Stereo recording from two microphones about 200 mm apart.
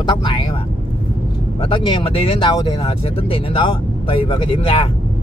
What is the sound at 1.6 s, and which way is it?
Speech, 25° left (ahead or behind).